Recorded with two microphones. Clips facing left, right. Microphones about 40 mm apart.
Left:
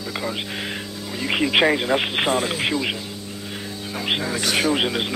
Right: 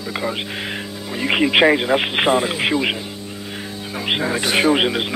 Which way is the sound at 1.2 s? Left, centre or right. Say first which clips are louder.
Right 4 dB; centre.